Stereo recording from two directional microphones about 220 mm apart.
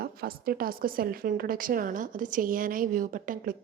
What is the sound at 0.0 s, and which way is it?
A woman's voice, 45° right (ahead or behind).